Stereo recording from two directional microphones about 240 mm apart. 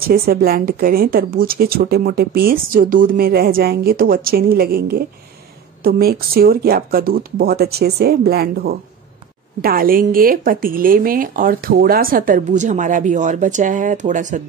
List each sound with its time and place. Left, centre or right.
0.0 s speech: right